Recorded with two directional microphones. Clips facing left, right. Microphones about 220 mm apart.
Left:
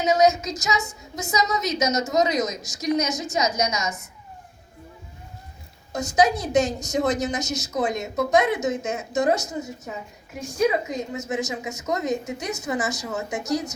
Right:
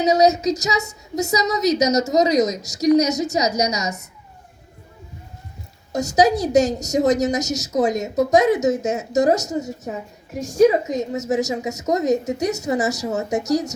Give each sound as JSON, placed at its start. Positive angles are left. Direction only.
{"t": 0.0, "sound": "a woman's voice", "side_deg": -40}
{"t": 5.9, "sound": "a woman's voice", "side_deg": -40}